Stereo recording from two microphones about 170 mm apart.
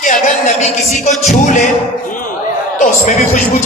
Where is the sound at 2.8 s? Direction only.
45° left (ahead or behind).